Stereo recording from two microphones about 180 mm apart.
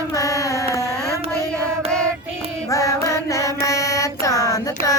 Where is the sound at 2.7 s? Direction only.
20° left (ahead or behind).